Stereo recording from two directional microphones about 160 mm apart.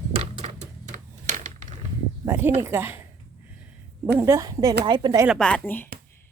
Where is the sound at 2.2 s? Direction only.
15° right (ahead or behind).